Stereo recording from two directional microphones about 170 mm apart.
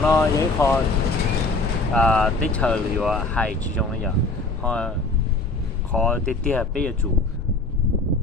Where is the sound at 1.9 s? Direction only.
5° left (ahead or behind).